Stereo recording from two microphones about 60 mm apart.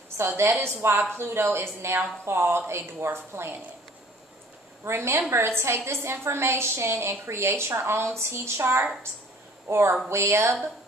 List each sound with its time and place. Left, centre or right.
0.2 s a woman's voice: right
4.8 s a woman's voice: right